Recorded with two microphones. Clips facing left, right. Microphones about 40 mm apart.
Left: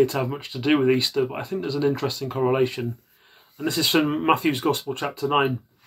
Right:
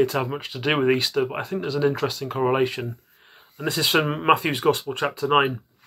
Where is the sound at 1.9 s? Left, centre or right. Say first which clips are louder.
Right 1 dB; centre; by 5.5 s right.